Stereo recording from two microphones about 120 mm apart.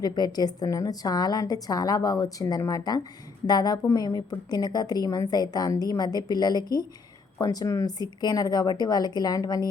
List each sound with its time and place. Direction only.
0.0 s a woman's voice: 35° left (ahead or behind)